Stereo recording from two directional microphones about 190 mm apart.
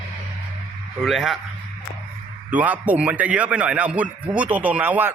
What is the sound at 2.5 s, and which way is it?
A man's voice, 10° right (ahead or behind).